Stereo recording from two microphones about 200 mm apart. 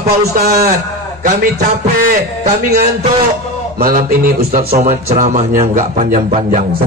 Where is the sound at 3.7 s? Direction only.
45° right (ahead or behind).